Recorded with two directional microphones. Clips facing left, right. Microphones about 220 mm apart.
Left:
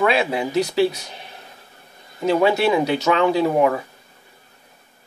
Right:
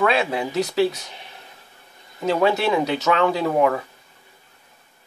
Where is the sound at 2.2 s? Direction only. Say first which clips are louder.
Left 2 dB; centre (ahead or behind).